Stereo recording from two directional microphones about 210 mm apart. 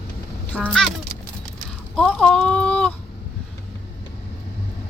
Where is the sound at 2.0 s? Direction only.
5° left (ahead or behind).